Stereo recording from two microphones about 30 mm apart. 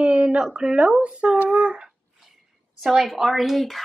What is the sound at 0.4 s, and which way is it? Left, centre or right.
Speech, right.